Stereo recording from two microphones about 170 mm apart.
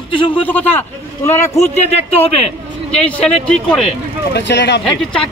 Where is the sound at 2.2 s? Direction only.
35° left (ahead or behind).